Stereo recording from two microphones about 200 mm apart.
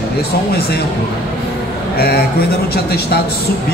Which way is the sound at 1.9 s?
50° left (ahead or behind).